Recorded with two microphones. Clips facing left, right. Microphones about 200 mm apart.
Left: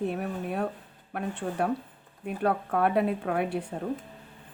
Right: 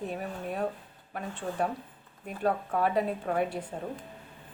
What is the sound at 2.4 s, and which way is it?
Speech, 65° left (ahead or behind).